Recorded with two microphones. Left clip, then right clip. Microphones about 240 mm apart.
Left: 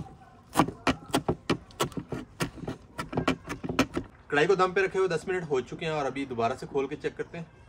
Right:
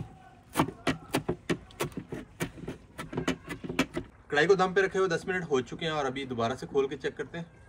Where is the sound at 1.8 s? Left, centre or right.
Left.